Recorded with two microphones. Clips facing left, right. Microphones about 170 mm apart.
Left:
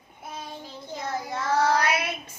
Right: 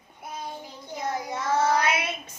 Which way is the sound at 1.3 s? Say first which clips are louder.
Left 1 dB; 20° right (ahead or behind).